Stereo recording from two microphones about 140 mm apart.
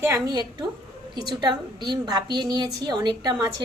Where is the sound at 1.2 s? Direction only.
30° right (ahead or behind).